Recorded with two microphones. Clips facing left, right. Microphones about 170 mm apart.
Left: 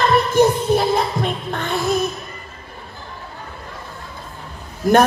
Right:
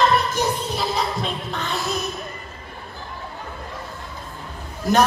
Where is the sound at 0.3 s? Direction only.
55° left (ahead or behind).